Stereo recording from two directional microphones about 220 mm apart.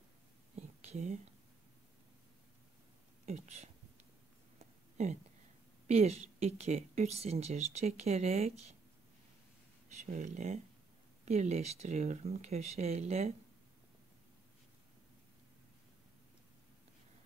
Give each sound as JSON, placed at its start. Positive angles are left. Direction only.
{"t": 0.6, "sound": "whispering", "side_deg": -30}
{"t": 3.3, "sound": "speech", "side_deg": -30}
{"t": 5.0, "sound": "speech", "side_deg": -30}
{"t": 9.8, "sound": "speech", "side_deg": -35}